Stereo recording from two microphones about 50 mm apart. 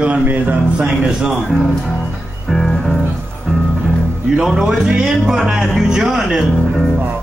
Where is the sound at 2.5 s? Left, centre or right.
Centre.